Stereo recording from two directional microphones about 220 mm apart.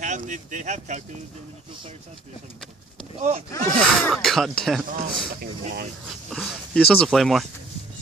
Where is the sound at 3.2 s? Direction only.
30° right (ahead or behind).